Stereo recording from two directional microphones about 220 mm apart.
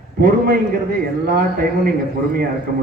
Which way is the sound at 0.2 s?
40° right (ahead or behind).